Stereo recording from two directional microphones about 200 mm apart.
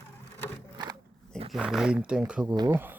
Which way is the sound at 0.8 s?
20° right (ahead or behind).